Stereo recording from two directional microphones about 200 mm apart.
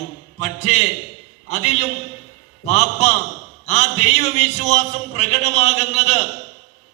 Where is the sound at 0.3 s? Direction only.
35° left (ahead or behind).